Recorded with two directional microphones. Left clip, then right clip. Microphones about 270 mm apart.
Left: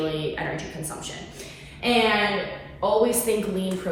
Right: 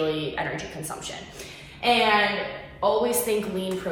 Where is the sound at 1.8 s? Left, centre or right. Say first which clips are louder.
Right 1 dB; centre.